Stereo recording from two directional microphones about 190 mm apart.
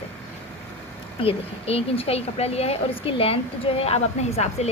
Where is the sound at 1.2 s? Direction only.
30° left (ahead or behind).